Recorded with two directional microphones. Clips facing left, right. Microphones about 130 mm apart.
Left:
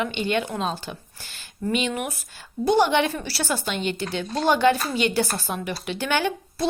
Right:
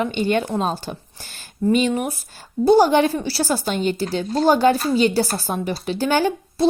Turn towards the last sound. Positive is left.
turn(degrees=-35)  # may be behind; listen again after turning